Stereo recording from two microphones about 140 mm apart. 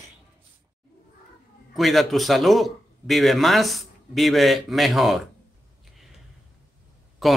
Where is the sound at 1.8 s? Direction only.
Centre (ahead or behind).